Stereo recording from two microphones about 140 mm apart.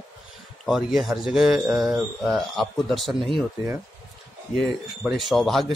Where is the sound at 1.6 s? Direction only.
10° right (ahead or behind).